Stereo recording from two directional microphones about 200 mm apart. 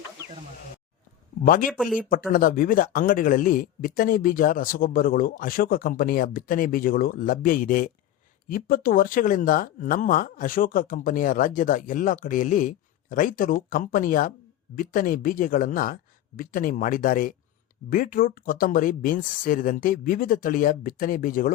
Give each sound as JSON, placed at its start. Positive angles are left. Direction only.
{"t": 1.5, "sound": "speech", "side_deg": 45}
{"t": 1.7, "sound": "speech", "side_deg": 0}
{"t": 2.0, "sound": "speech", "side_deg": 45}